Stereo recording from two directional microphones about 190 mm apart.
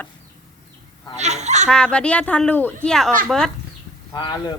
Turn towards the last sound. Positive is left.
turn(degrees=25)  # may be behind; listen again after turning